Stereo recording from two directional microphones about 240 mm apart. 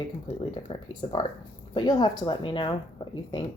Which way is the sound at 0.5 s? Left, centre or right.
Centre.